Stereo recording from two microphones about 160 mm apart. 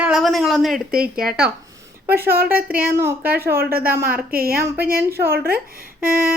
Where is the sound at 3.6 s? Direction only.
70° right (ahead or behind).